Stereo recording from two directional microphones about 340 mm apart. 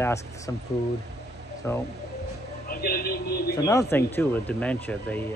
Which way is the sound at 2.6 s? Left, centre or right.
Left.